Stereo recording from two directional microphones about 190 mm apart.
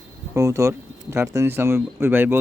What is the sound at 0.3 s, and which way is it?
Speech, 15° right (ahead or behind).